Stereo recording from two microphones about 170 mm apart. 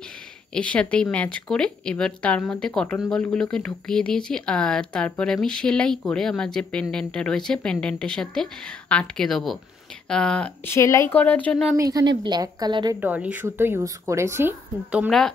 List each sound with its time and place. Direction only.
0.6 s speech: 5° left (ahead or behind)
11.7 s a woman's voice: 20° right (ahead or behind)
13.0 s a woman's voice: 10° right (ahead or behind)
15.0 s speech: centre (ahead or behind)